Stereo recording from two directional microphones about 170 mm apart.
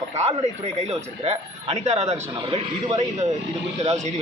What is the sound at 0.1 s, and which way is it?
A man's voice, 40° right (ahead or behind).